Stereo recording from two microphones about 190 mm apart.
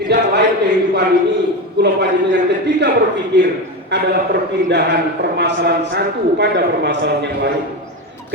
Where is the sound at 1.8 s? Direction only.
65° right (ahead or behind).